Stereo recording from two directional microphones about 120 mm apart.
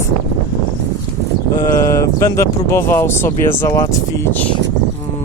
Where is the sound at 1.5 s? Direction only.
25° left (ahead or behind).